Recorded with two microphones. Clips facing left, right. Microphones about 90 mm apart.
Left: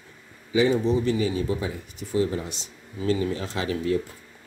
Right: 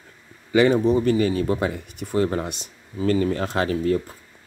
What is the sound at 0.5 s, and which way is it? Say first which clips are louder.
Speech: right 4 dB; 60° right (ahead or behind).